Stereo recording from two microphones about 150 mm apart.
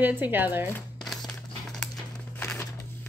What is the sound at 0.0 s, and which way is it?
Speech, 15° right (ahead or behind).